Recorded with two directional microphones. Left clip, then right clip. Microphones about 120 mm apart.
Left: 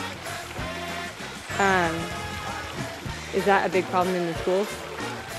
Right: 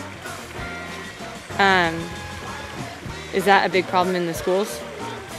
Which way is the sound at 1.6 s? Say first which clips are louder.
Right 5 dB; 45° right (ahead or behind).